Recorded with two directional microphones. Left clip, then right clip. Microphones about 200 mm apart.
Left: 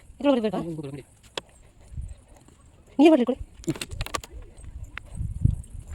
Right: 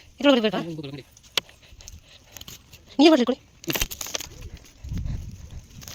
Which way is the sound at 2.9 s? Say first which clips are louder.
Right 1 dB; 10° left (ahead or behind).